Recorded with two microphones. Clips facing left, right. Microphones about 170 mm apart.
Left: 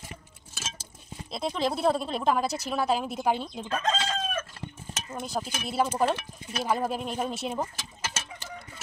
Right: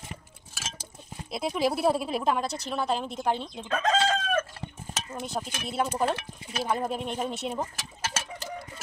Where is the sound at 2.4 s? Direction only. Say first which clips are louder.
Left 2 dB; 5° left (ahead or behind).